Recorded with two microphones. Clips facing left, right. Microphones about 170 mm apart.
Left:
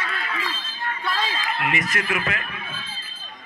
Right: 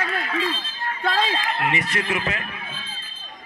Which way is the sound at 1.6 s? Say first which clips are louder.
Left 1 dB; 30° right (ahead or behind).